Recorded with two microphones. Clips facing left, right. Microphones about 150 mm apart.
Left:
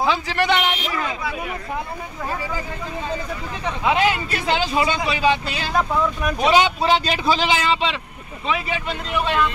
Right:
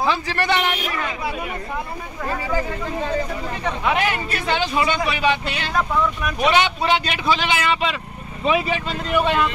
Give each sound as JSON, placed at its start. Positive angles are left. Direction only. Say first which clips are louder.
{"t": 0.0, "sound": "a man's voice", "louder": "left 1 dB", "side_deg": 15}
{"t": 3.8, "sound": "a man's voice", "louder": "left 3 dB", "side_deg": 25}
{"t": 9.2, "sound": "speech", "louder": "even", "side_deg": -15}